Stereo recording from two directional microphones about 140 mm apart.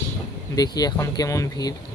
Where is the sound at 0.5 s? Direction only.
25° left (ahead or behind).